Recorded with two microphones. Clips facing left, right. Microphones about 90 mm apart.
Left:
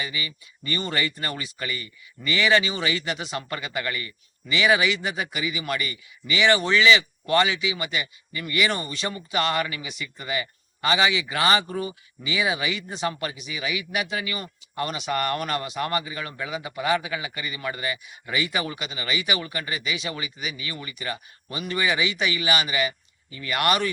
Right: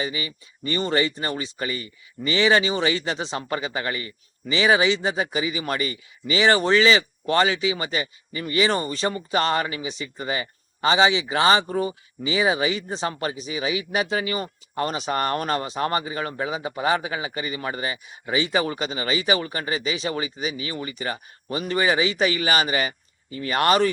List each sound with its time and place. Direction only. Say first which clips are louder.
0.0 s speech: right 4 dB; 30° right (ahead or behind)